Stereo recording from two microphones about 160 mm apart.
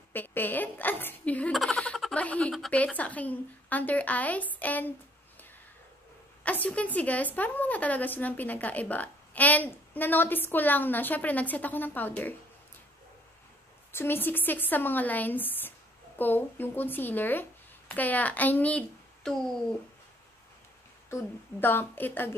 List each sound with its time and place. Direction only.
0.1 s a woman's voice: 10° left (ahead or behind)
6.4 s a woman's voice: 10° left (ahead or behind)
13.9 s a woman's voice: 15° left (ahead or behind)
21.1 s a woman's voice: 15° left (ahead or behind)